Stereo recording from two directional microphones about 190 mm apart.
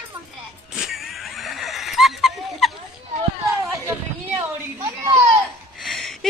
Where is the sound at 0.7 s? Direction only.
Centre (ahead or behind).